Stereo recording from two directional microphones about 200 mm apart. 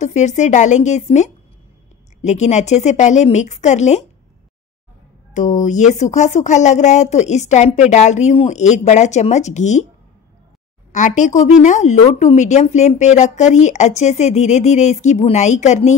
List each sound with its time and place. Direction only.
0.0 s speech: 35° left (ahead or behind)
5.3 s speech: 40° left (ahead or behind)
10.9 s speech: 40° left (ahead or behind)